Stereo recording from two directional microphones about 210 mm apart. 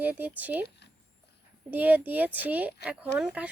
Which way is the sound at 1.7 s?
10° right (ahead or behind).